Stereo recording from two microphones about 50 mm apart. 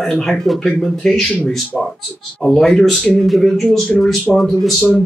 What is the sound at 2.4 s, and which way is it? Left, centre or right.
Speech, centre.